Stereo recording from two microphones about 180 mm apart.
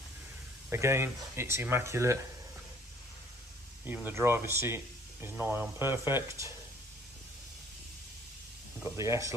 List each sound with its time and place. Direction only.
0.7 s speech: 15° right (ahead or behind)
3.8 s speech: 10° right (ahead or behind)
8.8 s speech: 15° right (ahead or behind)